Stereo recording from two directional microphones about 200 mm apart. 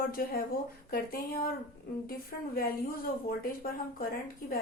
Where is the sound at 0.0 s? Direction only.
45° left (ahead or behind).